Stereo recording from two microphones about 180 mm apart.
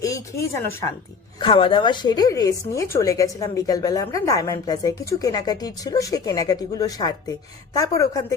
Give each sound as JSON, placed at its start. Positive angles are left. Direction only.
{"t": 0.0, "sound": "speech", "side_deg": 15}
{"t": 1.4, "sound": "a woman's voice", "side_deg": 30}